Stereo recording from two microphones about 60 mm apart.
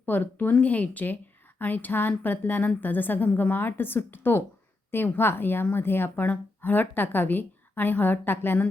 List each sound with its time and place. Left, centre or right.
0.0 s a woman's voice: left